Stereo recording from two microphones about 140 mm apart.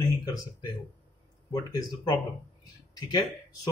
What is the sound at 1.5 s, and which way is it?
Speech, 30° left (ahead or behind).